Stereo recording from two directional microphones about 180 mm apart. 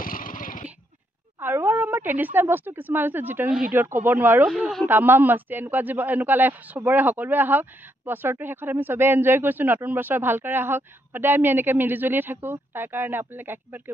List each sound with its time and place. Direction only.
0.0 s vehicle: 50° left (ahead or behind)
1.4 s speech: 10° right (ahead or behind)
4.5 s speech: centre (ahead or behind)
4.8 s speech: 10° right (ahead or behind)